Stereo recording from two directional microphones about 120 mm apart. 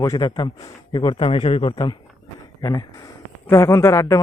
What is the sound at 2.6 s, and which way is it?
Speech, 30° left (ahead or behind).